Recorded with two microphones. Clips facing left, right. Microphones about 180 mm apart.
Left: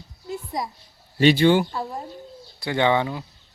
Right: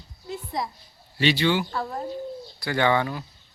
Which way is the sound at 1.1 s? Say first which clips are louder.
Left 6 dB; 50° left (ahead or behind).